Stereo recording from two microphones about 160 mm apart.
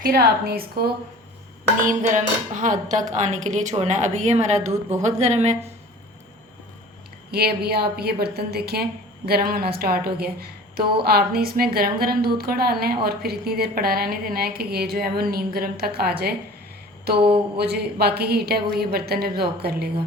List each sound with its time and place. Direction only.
0.0 s a woman's voice: 75° right (ahead or behind)
1.8 s a woman's voice: 55° right (ahead or behind)
4.7 s a woman's voice: 20° right (ahead or behind)
5.2 s a woman's voice: 45° right (ahead or behind)
7.3 s a woman's voice: 80° right
17.2 s a sound: 35° right (ahead or behind)
17.6 s a woman's voice: 85° right